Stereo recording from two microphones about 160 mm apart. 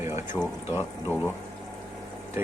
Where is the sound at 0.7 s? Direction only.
15° left (ahead or behind).